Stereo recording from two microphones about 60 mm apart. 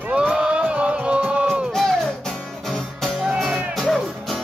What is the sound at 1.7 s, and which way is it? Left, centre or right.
Music, centre.